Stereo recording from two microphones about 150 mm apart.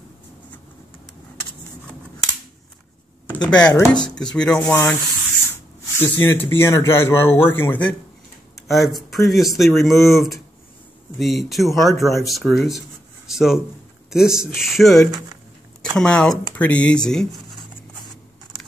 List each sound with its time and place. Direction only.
3.3 s speech: 5° left (ahead or behind)
3.7 s speech: 20° left (ahead or behind)
4.1 s speech: 5° left (ahead or behind)
5.9 s speech: 15° left (ahead or behind)
8.6 s speech: centre (ahead or behind)